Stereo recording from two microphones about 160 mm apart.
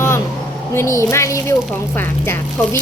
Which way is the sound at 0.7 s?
20° left (ahead or behind).